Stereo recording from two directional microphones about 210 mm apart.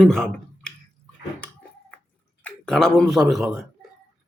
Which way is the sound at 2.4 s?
5° left (ahead or behind).